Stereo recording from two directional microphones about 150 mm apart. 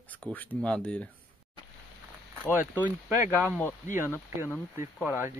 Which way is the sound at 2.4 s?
10° right (ahead or behind).